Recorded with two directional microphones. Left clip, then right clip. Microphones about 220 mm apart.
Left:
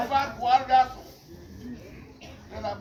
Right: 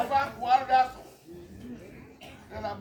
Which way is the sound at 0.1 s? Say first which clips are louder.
Left 3 dB; 5° right (ahead or behind).